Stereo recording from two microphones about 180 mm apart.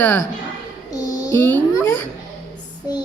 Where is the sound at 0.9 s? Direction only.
20° left (ahead or behind).